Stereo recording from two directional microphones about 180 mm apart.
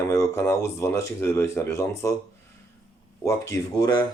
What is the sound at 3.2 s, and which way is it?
Speech, 15° left (ahead or behind).